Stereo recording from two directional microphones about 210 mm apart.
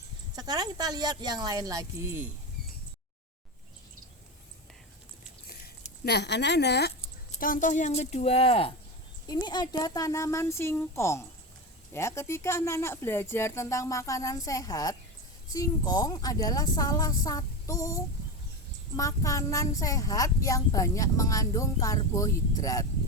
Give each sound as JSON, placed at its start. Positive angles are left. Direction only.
{"t": 0.3, "sound": "speech", "side_deg": -20}
{"t": 5.5, "sound": "a sound", "side_deg": 45}
{"t": 7.3, "sound": "speech", "side_deg": 40}